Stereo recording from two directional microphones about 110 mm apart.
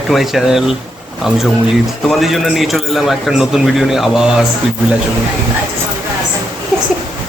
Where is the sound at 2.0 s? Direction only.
Centre (ahead or behind).